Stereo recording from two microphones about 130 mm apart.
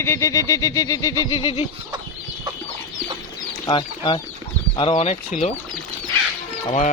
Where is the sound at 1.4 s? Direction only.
45° left (ahead or behind).